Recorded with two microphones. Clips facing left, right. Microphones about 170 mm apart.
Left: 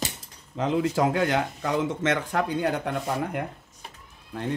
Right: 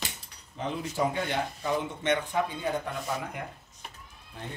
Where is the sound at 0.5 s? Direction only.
90° left; by 3.4 s 75° left (ahead or behind).